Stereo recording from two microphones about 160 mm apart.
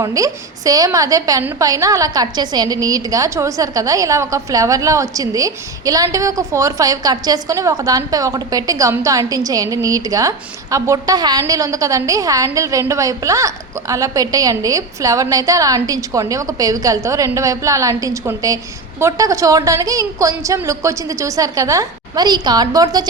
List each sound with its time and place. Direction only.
0.0 s a woman's voice: 20° right (ahead or behind)